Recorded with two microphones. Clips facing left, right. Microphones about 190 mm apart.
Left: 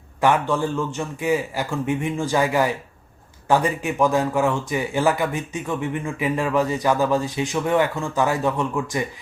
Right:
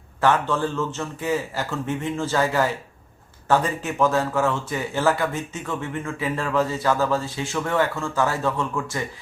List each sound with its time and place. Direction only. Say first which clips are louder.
0.2 s speech: left 1 dB; 15° left (ahead or behind)